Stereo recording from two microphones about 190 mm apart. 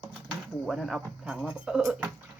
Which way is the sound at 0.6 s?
Centre (ahead or behind).